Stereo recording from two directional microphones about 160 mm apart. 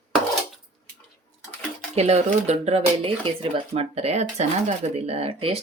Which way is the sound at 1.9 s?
40° right (ahead or behind).